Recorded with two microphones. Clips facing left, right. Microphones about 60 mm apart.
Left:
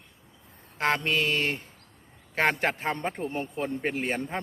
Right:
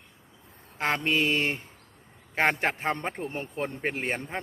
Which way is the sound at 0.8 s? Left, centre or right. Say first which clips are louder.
Even; centre.